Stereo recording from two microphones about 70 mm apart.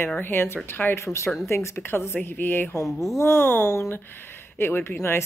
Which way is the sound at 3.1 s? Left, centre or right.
Left.